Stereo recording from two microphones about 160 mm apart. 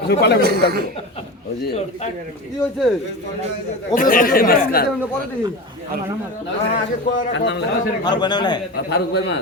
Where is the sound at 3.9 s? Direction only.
60° left (ahead or behind).